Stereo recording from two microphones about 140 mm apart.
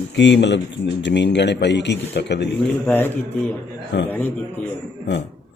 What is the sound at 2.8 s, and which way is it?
Speech, 15° left (ahead or behind).